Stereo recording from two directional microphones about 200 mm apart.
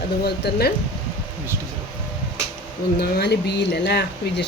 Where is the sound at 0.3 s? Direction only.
55° left (ahead or behind).